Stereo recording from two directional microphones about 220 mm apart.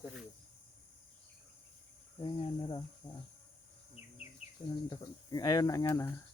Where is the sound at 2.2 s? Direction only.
20° left (ahead or behind).